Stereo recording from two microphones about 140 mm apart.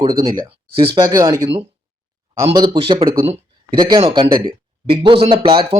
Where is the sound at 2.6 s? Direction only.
40° right (ahead or behind).